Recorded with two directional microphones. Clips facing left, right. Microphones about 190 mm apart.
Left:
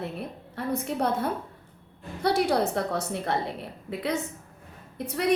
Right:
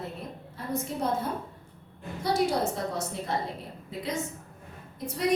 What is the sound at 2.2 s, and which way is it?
A woman's voice, 65° left (ahead or behind).